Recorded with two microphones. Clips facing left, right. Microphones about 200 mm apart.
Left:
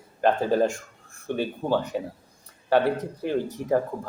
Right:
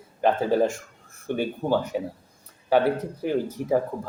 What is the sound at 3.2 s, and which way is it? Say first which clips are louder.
Speech: right 1 dB; 10° right (ahead or behind).